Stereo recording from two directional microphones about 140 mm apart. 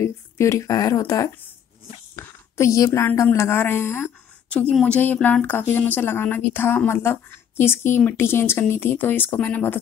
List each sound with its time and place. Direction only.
0.0 s a woman's voice: 20° left (ahead or behind)